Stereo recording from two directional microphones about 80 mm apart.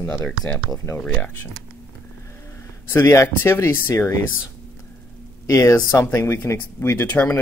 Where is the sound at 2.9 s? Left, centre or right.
Left.